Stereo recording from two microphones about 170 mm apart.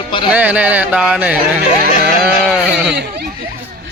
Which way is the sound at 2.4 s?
5° right (ahead or behind).